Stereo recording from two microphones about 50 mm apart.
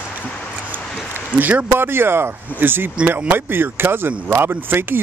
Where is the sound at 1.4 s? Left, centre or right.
Right.